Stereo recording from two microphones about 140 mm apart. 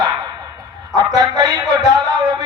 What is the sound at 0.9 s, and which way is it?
Speech, 30° right (ahead or behind).